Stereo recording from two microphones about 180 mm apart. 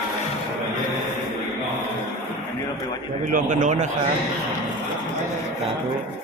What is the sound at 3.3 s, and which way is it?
Speech, 45° right (ahead or behind).